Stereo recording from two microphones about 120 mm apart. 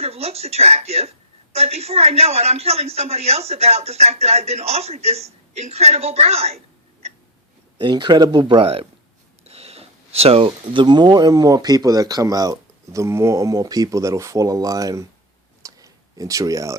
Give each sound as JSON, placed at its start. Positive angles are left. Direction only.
{"t": 0.0, "sound": "a woman's voice", "side_deg": -60}
{"t": 7.8, "sound": "speech", "side_deg": -40}
{"t": 15.6, "sound": "a sound", "side_deg": -30}